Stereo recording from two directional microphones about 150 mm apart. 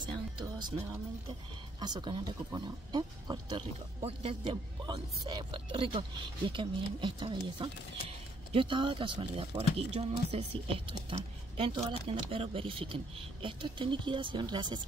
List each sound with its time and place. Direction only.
0.1 s music: 30° right (ahead or behind)
1.8 s speech: 30° right (ahead or behind)
4.0 s speech: 40° right (ahead or behind)